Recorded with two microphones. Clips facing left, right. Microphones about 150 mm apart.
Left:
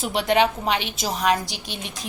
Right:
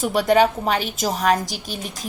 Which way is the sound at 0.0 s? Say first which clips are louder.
Right 3 dB; 45° right (ahead or behind).